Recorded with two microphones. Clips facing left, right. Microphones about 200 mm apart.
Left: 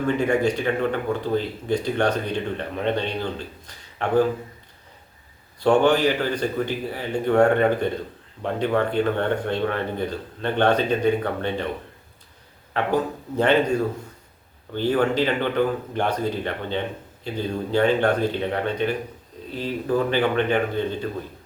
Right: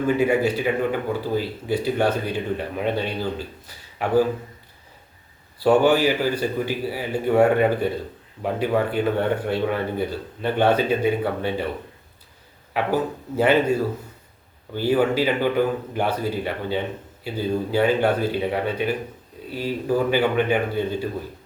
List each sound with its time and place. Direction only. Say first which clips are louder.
0.2 s speech: right 1 dB; 5° right (ahead or behind)
5.5 s speech: right 1 dB; 5° right (ahead or behind)
12.7 s speech: even; 5° right (ahead or behind)